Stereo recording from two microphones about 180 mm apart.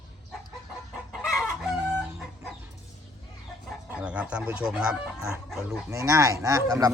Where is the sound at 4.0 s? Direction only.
5° right (ahead or behind).